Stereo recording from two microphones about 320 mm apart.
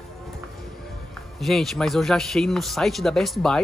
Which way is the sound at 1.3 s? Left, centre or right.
Centre.